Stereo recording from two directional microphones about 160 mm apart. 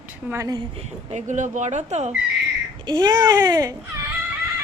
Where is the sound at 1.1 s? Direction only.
50° right (ahead or behind).